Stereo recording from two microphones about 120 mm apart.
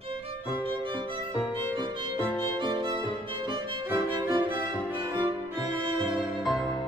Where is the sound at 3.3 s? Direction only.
45° right (ahead or behind).